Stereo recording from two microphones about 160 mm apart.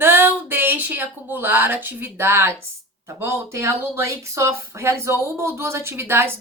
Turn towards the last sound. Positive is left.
turn(degrees=-15)  # may be behind; listen again after turning